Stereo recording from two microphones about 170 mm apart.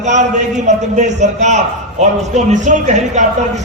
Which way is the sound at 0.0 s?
45° right (ahead or behind).